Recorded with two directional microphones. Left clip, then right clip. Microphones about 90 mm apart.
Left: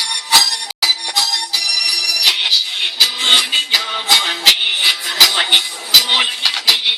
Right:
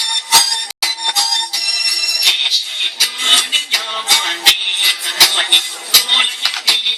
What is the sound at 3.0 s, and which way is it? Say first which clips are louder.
Music: left 2 dB; 5° left (ahead or behind).